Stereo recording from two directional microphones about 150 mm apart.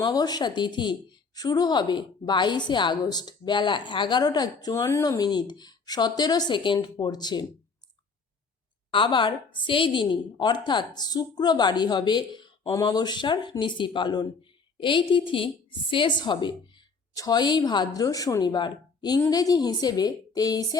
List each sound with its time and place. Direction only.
0.0 s a woman's voice: 25° left (ahead or behind)
8.9 s a woman's voice: 35° left (ahead or behind)